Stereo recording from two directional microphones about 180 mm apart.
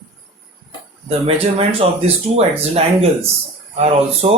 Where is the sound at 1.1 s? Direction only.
30° right (ahead or behind).